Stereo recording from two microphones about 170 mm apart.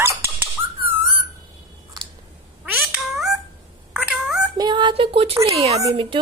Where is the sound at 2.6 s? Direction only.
5° right (ahead or behind).